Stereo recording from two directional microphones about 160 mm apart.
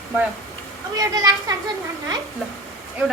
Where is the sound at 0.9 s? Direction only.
20° right (ahead or behind).